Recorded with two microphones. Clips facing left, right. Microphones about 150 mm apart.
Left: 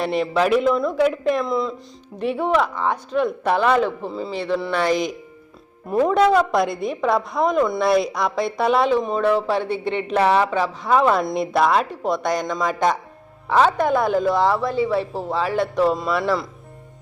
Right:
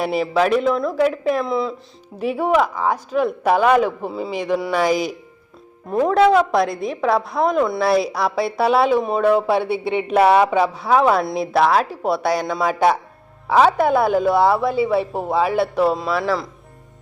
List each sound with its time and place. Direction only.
0.0 s a woman's voice: 5° right (ahead or behind)